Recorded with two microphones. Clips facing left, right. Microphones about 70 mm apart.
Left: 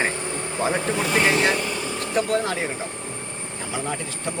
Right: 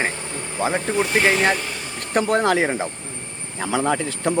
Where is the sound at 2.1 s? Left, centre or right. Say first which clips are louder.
Right 5 dB; right.